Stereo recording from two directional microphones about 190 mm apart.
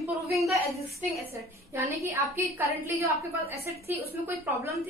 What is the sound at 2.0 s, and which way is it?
A woman's voice, 15° right (ahead or behind).